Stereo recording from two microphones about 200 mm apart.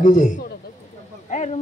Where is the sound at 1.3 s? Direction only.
35° left (ahead or behind).